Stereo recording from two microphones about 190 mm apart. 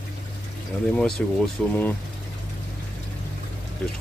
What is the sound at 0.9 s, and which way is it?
Speech, centre (ahead or behind).